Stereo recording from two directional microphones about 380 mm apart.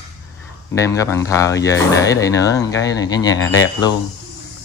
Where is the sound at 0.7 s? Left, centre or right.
Centre.